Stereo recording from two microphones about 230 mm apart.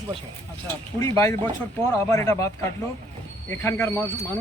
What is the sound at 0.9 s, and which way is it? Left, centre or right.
Speech, centre.